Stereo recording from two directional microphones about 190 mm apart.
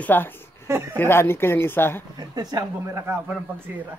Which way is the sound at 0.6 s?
10° right (ahead or behind).